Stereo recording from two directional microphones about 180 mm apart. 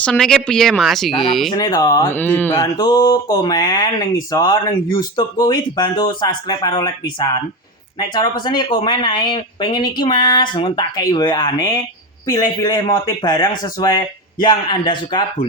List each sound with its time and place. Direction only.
0.0 s speech: 5° left (ahead or behind)
1.5 s speech: 20° left (ahead or behind)
2.7 s speech: 20° left (ahead or behind)